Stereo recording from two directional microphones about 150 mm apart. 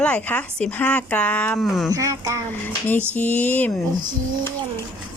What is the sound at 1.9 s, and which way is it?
Speech, 20° right (ahead or behind).